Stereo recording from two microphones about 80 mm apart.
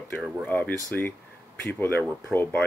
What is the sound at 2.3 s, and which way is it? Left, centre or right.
Speech, left.